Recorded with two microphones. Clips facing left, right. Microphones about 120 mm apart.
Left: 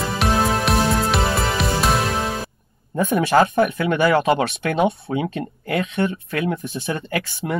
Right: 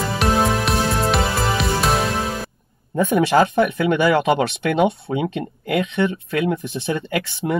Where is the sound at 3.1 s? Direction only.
25° right (ahead or behind).